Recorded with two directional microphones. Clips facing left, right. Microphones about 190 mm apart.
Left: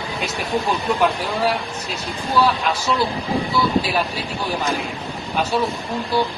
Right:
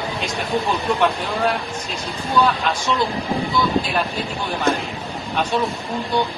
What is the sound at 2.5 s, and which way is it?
Speech, 5° left (ahead or behind).